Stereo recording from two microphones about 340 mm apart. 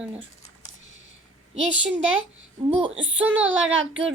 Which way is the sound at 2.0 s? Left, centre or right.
Right.